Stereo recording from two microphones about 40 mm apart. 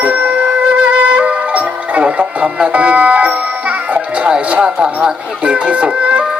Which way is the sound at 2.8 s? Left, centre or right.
Right.